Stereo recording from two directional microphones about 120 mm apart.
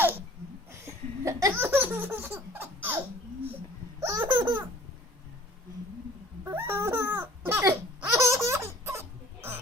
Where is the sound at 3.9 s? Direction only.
25° right (ahead or behind).